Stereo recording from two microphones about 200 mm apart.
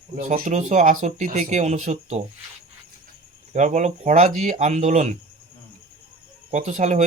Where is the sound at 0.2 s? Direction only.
40° right (ahead or behind).